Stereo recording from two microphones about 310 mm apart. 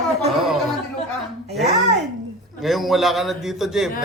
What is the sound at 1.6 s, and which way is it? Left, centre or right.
Speech, right.